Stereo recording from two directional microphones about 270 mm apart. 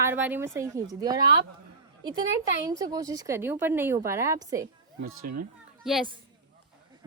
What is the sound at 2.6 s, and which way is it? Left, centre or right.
Speech, centre.